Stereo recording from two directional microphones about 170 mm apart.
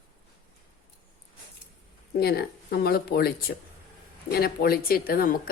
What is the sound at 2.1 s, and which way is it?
A woman's voice, 65° left (ahead or behind).